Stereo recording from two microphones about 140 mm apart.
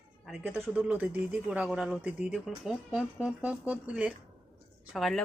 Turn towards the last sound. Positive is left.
turn(degrees=0)  # may be behind; listen again after turning